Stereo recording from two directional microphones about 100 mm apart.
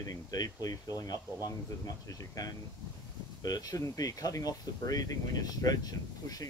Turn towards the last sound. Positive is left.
turn(degrees=40)  # may be behind; listen again after turning